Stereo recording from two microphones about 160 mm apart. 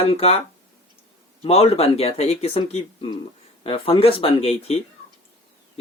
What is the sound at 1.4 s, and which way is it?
Speech, 40° left (ahead or behind).